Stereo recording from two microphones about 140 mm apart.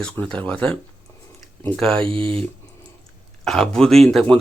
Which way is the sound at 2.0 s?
40° right (ahead or behind).